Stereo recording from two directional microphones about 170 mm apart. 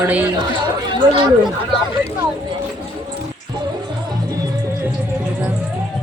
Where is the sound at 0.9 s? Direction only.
30° right (ahead or behind).